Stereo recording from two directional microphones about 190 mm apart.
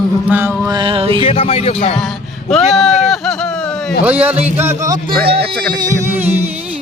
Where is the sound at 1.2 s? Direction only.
30° left (ahead or behind).